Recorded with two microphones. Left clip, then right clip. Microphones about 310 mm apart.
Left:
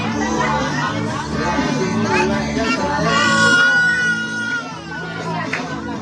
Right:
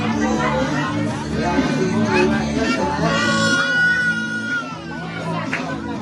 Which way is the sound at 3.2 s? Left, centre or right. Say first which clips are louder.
Left 6 dB; left.